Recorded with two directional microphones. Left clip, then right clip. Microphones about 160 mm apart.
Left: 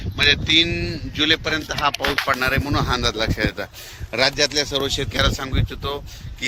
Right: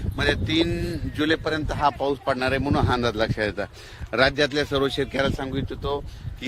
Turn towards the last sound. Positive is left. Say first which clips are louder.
# left 1 dB
turn(degrees=-30)  # may be behind; listen again after turning